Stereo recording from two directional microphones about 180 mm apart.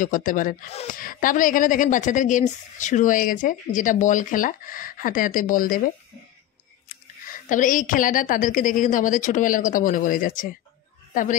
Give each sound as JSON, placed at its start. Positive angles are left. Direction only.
{"t": 0.0, "sound": "speech", "side_deg": 45}
{"t": 7.2, "sound": "speech", "side_deg": 45}